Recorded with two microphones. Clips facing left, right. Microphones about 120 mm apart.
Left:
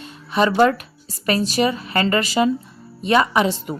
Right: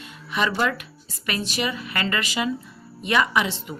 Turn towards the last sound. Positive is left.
turn(degrees=40)  # may be behind; listen again after turning